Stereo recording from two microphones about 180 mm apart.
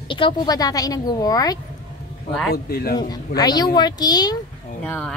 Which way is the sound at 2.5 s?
60° left (ahead or behind).